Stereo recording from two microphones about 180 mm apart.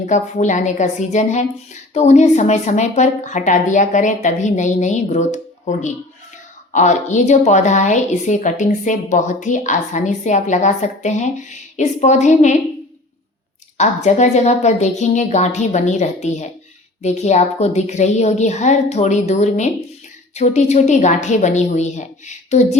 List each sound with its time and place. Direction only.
0.0 s a woman's voice: 40° left (ahead or behind)
13.7 s a woman's voice: 40° left (ahead or behind)